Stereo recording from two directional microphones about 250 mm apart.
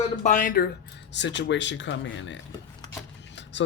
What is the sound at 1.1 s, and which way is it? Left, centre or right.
Speech, left.